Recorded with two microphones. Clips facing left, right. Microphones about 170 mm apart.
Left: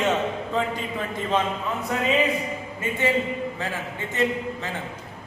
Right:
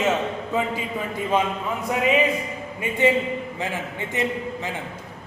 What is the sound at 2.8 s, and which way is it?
A man's voice, 15° right (ahead or behind).